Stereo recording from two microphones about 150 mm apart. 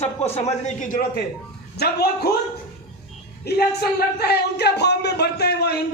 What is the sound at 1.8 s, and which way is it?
Speech, 90° left.